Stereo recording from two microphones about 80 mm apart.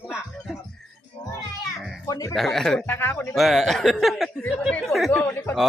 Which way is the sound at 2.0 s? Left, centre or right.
Left.